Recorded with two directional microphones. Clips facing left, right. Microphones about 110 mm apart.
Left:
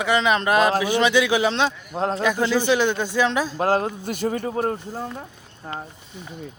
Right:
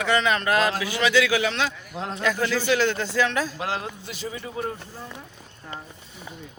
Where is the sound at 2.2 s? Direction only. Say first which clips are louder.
Left 2 dB; 20° left (ahead or behind).